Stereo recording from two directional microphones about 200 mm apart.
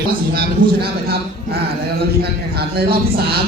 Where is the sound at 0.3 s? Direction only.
50° right (ahead or behind).